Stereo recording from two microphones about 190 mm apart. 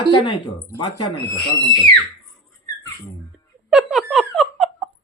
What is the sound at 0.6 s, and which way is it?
Speech, 20° left (ahead or behind).